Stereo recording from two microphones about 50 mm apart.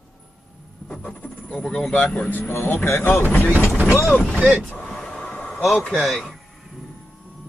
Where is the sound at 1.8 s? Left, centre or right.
Left.